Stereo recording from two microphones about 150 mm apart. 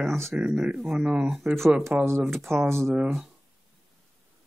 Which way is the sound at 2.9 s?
5° right (ahead or behind).